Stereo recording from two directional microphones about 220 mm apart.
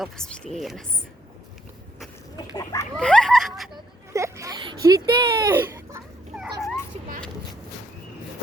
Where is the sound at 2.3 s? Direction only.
15° left (ahead or behind).